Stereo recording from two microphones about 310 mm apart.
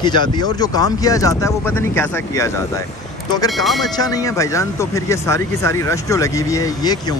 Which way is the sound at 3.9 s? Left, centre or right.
Centre.